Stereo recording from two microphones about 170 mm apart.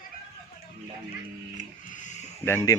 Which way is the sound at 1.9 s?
45° left (ahead or behind).